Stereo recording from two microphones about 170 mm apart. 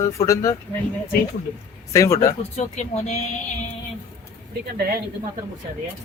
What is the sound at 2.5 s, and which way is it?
Speech, 40° left (ahead or behind).